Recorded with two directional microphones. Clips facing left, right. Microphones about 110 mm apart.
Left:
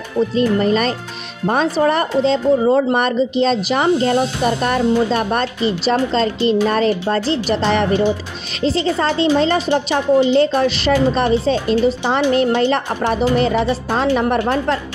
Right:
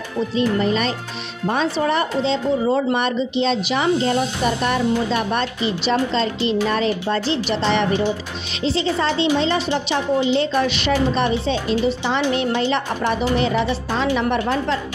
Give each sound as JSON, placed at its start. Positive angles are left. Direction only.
{"t": 0.4, "sound": "a woman's voice", "side_deg": 45}